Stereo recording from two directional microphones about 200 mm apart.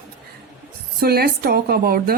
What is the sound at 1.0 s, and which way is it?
Speech, 50° right (ahead or behind).